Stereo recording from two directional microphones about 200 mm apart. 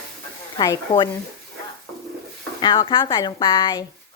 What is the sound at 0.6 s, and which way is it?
Speech, 20° left (ahead or behind).